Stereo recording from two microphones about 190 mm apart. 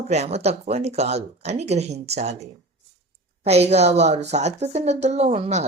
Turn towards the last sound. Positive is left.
turn(degrees=-35)  # may be behind; listen again after turning